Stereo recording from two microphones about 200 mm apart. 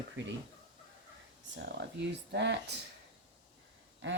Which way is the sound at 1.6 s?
60° right (ahead or behind).